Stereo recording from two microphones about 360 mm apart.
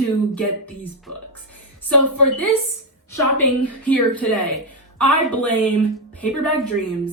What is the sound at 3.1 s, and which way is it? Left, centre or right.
A woman's voice, centre.